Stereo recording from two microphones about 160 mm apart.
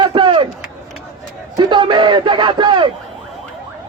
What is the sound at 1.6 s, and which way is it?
Speech, 30° right (ahead or behind).